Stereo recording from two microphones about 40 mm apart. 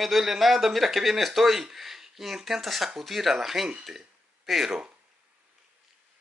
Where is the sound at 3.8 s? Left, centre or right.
Centre.